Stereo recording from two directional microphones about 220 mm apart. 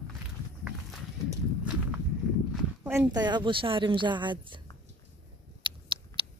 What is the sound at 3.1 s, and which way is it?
A woman's voice, 20° right (ahead or behind).